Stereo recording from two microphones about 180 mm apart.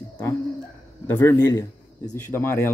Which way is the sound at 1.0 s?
10° left (ahead or behind).